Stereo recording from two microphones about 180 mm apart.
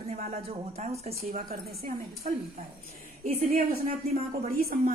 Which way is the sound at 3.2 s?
40° right (ahead or behind).